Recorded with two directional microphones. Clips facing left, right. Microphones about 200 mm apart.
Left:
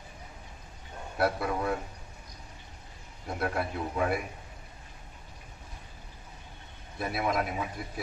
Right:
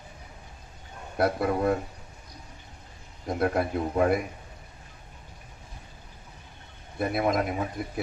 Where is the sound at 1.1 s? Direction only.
45° right (ahead or behind).